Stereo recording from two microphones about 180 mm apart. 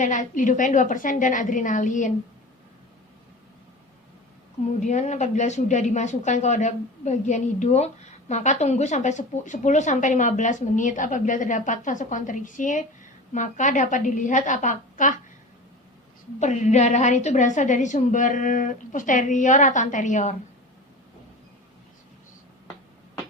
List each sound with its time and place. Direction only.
0.0 s speech: 45° left (ahead or behind)
4.8 s speech: 40° left (ahead or behind)
16.4 s speech: 40° left (ahead or behind)